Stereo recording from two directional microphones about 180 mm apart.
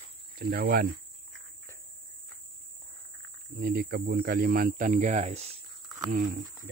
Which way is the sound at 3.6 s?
55° right (ahead or behind).